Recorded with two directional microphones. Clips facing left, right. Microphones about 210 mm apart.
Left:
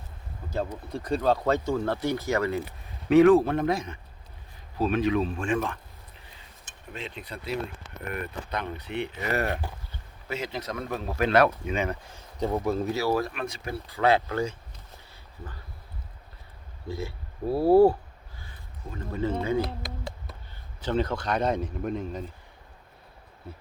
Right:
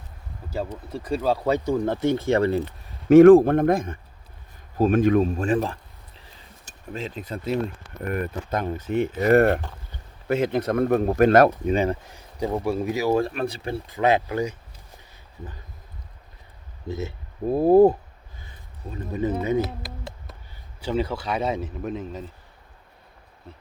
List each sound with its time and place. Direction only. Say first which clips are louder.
0.9 s speech: right 1 dB; 5° right (ahead or behind); by 2.6 s 30° right (ahead or behind)
3.1 s speech: right 7 dB; 45° right (ahead or behind)
6.9 s speech: right 6 dB; 40° right (ahead or behind)
11.4 s speech: right 6 dB; 35° right (ahead or behind)
12.1 s speech: right 2 dB; 15° right (ahead or behind)
13.1 s speech: right 6 dB; 30° right (ahead or behind)
16.9 s speech: right 3 dB; 20° right (ahead or behind)
19.6 s speech: right 1 dB; centre (ahead or behind)